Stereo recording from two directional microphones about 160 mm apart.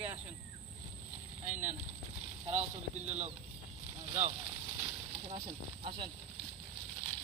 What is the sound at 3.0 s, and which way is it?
Speech, 45° right (ahead or behind).